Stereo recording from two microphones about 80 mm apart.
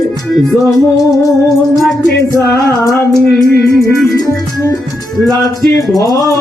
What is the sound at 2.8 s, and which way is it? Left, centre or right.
Music, left.